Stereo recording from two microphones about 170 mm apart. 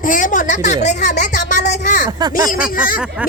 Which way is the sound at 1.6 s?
80° left.